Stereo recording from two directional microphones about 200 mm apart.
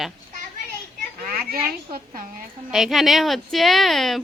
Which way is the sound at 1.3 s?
45° right (ahead or behind).